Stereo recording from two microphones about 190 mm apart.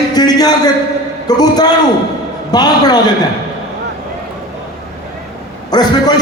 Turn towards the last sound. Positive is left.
turn(degrees=20)  # may be behind; listen again after turning